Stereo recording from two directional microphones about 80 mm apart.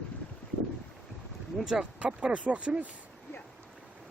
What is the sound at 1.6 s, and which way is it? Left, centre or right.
Speech, centre.